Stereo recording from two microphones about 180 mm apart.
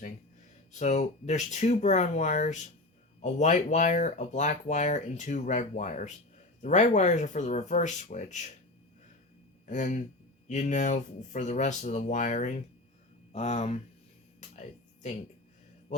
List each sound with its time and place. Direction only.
0.7 s speech: 40° left (ahead or behind)
9.6 s speech: 45° left (ahead or behind)
15.9 s mantra: 40° left (ahead or behind)